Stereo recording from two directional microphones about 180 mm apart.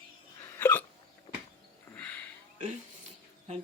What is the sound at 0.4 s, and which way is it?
Hiccup, 15° left (ahead or behind).